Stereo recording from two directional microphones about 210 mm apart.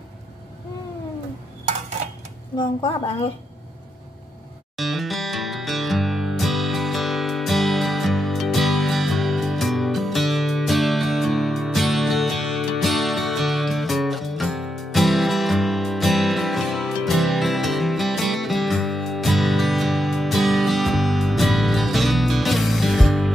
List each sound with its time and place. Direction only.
2.5 s speech: 25° left (ahead or behind)
4.7 s music: centre (ahead or behind)